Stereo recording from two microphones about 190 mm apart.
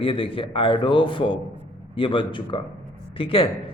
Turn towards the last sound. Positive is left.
turn(degrees=30)  # may be behind; listen again after turning